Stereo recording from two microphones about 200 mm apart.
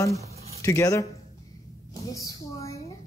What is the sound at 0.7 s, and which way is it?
Speech, 15° left (ahead or behind).